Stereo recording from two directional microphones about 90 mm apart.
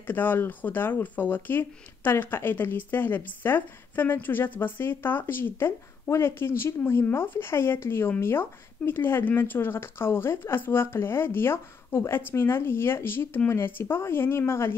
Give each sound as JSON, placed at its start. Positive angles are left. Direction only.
{"t": 0.0, "sound": "speech", "side_deg": 20}